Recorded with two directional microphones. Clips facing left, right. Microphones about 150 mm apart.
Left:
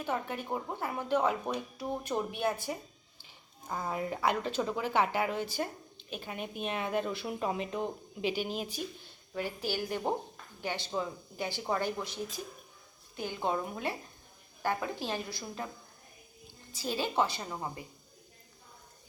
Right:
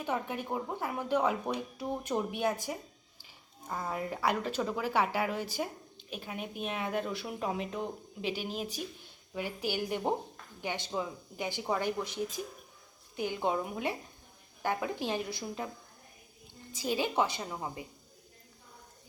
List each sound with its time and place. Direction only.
0.0 s speech: 15° right (ahead or behind)
3.7 s speech: centre (ahead or behind)
9.3 s speech: 15° right (ahead or behind)
16.7 s speech: 15° right (ahead or behind)